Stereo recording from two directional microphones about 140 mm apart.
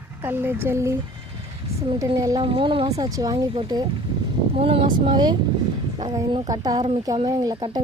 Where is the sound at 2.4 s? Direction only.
40° right (ahead or behind).